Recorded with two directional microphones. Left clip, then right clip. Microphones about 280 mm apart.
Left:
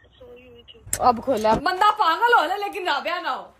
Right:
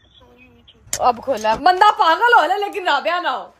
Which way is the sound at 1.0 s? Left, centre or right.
Right.